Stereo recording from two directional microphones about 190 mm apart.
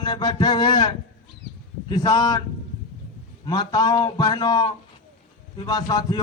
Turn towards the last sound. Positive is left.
turn(degrees=20)  # may be behind; listen again after turning